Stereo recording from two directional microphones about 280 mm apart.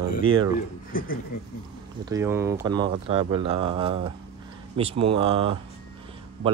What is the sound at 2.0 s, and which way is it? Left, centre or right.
Speech, centre.